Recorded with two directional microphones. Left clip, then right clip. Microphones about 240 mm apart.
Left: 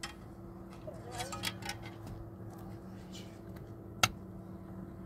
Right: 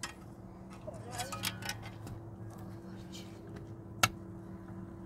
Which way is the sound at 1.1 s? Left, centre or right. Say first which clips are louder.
Right 1 dB; centre.